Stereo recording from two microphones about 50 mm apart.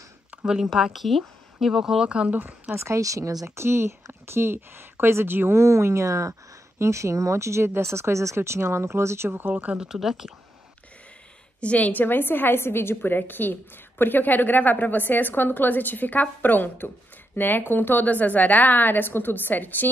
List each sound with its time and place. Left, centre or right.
0.7 s speech: centre
2.0 s speech: right
2.7 s speech: right
5.6 s speech: right
6.8 s speech: right
8.4 s speech: right
9.8 s speech: centre
11.6 s a woman's voice: left